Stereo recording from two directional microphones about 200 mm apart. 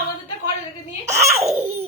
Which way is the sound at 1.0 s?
35° right (ahead or behind).